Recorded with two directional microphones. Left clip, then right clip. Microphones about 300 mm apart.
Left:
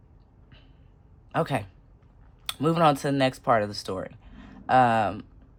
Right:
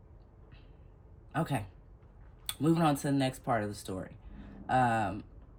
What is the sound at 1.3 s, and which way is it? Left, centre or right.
Speech, centre.